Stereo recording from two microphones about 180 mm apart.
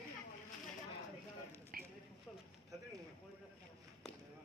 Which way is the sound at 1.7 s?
50° right (ahead or behind).